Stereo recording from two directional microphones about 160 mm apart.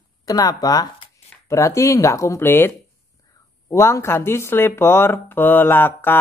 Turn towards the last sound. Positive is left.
turn(degrees=15)  # may be behind; listen again after turning